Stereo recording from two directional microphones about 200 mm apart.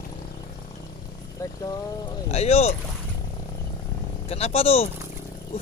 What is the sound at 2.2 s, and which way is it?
Boat, 30° left (ahead or behind).